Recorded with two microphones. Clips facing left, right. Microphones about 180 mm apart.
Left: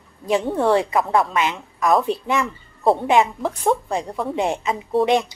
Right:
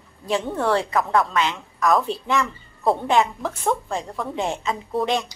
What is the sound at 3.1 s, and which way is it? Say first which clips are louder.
A woman's voice: left 3 dB; 15° left (ahead or behind).